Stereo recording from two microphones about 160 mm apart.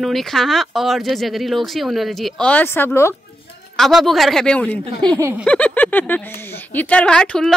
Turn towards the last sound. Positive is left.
turn(degrees=5)  # may be behind; listen again after turning